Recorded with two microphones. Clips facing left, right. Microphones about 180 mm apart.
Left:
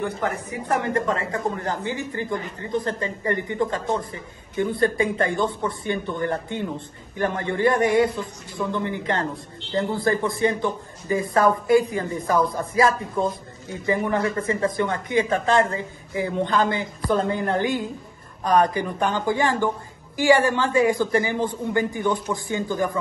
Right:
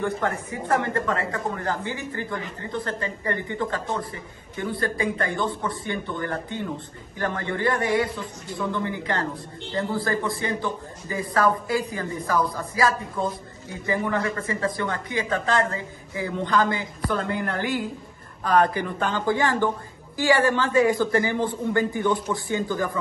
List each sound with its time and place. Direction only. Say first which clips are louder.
0.0 s a man's voice: even; 15° left (ahead or behind)